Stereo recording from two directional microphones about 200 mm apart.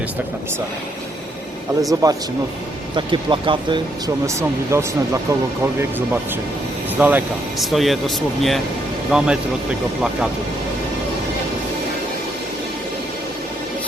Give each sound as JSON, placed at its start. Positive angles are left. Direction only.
{"t": 1.9, "sound": "speech", "side_deg": -15}
{"t": 7.0, "sound": "speech", "side_deg": -10}